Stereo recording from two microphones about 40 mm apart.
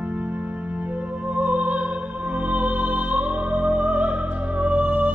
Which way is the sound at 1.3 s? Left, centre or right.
Right.